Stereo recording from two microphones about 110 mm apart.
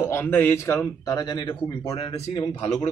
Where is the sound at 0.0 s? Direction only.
20° left (ahead or behind); by 2.3 s 65° left (ahead or behind).